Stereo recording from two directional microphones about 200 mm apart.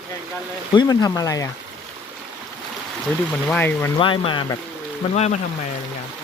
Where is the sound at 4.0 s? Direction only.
25° left (ahead or behind).